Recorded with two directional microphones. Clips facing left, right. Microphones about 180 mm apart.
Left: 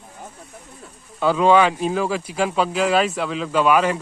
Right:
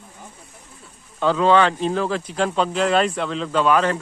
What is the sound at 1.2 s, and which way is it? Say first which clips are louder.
Speech: left 1 dB; 10° left (ahead or behind).